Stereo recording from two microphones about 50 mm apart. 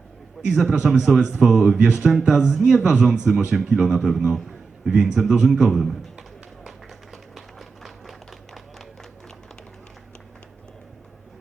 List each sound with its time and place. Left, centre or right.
0.4 s a man's voice: centre
6.7 s run: centre